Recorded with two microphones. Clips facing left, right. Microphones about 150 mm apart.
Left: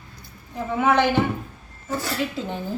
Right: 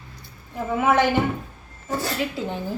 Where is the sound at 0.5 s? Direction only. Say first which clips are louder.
Even; 5° right (ahead or behind).